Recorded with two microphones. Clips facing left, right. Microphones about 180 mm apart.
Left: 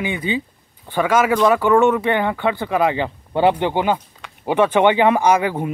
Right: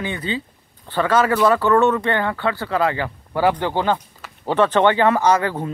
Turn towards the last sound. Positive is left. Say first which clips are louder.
# left 1 dB
turn(degrees=15)  # may be behind; listen again after turning